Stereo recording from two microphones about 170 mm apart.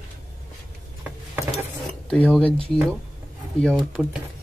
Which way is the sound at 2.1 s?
5° left (ahead or behind).